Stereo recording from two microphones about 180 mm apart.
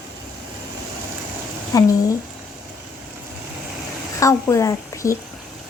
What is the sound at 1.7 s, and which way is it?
Speech, 20° left (ahead or behind).